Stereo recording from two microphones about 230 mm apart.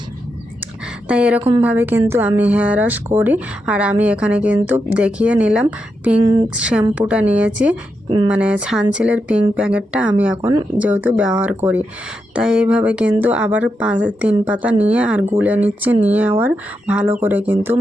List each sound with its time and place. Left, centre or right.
1.0 s a woman's voice: centre
1.4 s a woman's voice: right
1.6 s a woman's voice: centre